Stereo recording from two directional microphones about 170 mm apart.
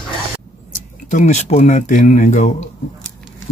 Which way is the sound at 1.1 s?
45° left (ahead or behind).